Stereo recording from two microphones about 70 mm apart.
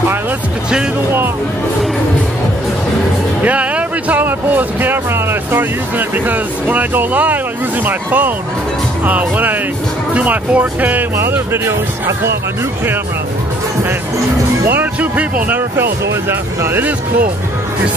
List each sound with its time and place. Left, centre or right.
3.4 s speech: centre
11.1 s speech: right
14.7 s speech: right
15.7 s speech: right